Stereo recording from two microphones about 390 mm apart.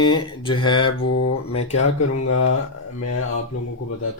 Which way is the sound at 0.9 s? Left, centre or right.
Left.